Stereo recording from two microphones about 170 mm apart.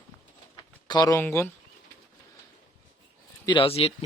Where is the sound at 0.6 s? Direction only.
25° left (ahead or behind).